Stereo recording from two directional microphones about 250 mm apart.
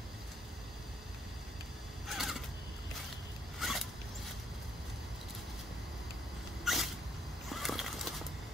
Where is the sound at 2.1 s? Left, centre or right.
Centre.